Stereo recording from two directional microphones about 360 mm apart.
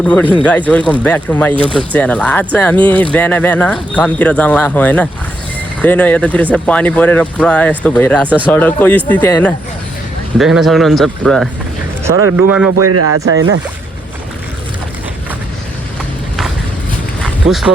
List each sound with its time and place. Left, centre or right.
0.0 s speech: centre
12.7 s speech: right
17.2 s vehicle: centre